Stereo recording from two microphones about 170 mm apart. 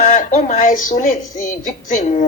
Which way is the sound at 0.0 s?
45° left (ahead or behind).